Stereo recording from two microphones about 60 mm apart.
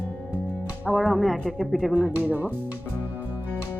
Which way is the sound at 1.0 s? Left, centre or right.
Centre.